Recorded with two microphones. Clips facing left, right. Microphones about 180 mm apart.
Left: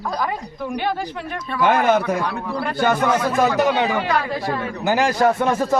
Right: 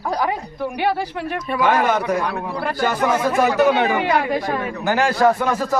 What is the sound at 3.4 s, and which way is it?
Speech, 15° right (ahead or behind).